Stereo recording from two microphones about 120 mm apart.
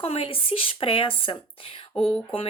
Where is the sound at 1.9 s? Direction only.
5° left (ahead or behind).